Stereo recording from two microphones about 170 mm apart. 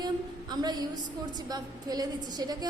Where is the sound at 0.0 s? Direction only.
25° right (ahead or behind).